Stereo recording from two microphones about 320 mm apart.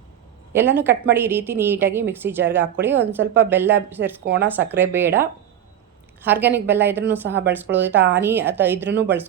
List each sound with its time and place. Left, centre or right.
0.5 s a woman's voice: centre
4.0 s speech: right
4.4 s a woman's voice: centre
8.9 s speech: right